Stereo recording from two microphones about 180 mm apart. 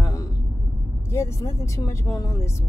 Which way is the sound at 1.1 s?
15° left (ahead or behind).